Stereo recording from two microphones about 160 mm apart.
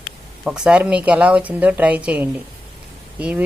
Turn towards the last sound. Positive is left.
turn(degrees=-10)  # may be behind; listen again after turning